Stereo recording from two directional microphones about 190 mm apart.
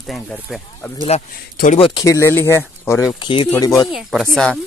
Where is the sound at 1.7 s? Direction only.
30° left (ahead or behind).